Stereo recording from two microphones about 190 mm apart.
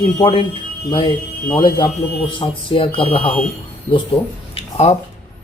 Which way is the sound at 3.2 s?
5° left (ahead or behind).